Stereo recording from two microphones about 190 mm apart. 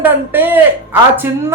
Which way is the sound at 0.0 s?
10° right (ahead or behind).